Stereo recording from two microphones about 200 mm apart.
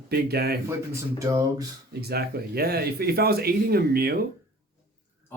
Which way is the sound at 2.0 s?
50° right (ahead or behind).